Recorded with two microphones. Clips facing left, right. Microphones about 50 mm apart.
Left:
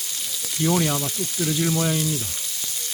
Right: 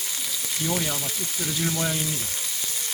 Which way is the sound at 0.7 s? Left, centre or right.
Centre.